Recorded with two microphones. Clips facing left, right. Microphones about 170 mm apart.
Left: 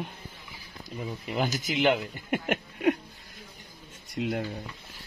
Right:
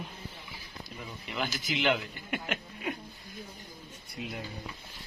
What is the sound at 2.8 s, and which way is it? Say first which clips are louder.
Speech: left 13 dB; 75° left (ahead or behind).